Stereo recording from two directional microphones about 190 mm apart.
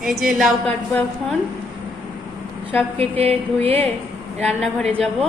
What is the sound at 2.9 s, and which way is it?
Music, 30° right (ahead or behind).